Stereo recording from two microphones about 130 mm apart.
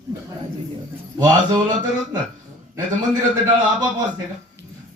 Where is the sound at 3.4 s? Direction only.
35° right (ahead or behind).